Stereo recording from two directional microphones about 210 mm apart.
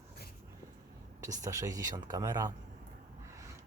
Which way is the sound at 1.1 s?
15° right (ahead or behind).